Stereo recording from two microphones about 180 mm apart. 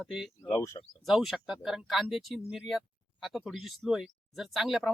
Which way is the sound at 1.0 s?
Centre (ahead or behind).